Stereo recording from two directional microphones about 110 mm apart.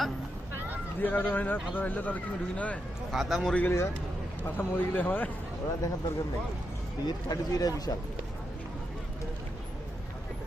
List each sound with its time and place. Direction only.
1.0 s speech: 15° left (ahead or behind)
3.1 s speech: centre (ahead or behind)
3.6 s speech: 25° left (ahead or behind)
5.8 s speech: 30° left (ahead or behind)